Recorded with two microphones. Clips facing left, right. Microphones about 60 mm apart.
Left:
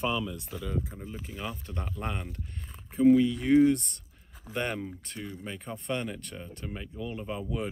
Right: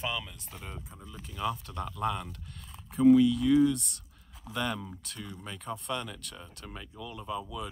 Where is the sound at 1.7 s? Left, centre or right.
Left.